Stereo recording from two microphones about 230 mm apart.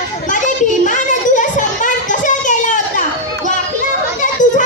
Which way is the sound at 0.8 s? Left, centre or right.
Left.